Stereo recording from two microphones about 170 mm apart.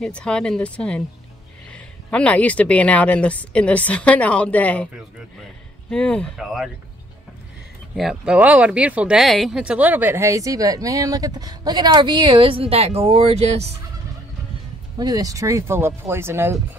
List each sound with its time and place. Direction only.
0.0 s speech: 5° left (ahead or behind)
5.9 s speech: 5° left (ahead or behind)
7.9 s speech: 5° right (ahead or behind); by 13.7 s 40° right (ahead or behind)
15.0 s speech: 20° right (ahead or behind)